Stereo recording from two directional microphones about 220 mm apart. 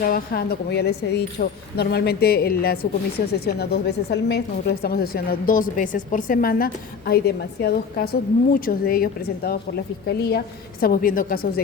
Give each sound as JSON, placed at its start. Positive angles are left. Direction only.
{"t": 0.0, "sound": "a woman's voice", "side_deg": 40}